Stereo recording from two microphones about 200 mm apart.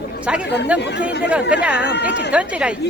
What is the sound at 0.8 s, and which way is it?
Speech, 60° left (ahead or behind).